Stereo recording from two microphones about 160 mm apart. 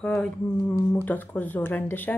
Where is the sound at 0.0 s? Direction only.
5° left (ahead or behind).